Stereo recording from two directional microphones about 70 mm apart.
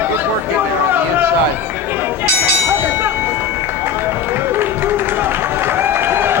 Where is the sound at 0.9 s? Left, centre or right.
Right.